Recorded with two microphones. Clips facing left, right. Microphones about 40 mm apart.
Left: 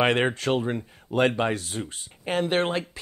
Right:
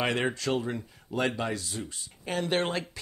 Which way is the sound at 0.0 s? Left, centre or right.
Left.